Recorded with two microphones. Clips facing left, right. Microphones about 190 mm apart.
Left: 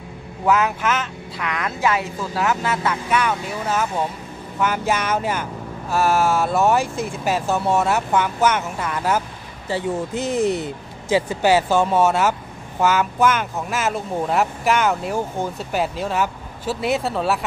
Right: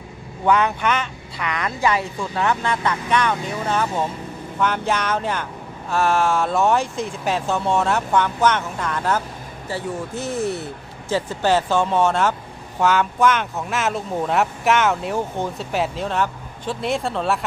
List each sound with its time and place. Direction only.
0.5 s speech: 5° left (ahead or behind)
9.7 s speech: 15° left (ahead or behind)